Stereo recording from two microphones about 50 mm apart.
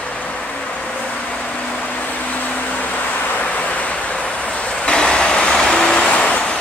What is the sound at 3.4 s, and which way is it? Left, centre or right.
Waves, left.